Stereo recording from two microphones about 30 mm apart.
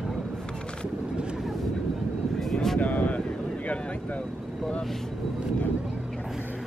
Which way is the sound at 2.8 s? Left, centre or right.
Left.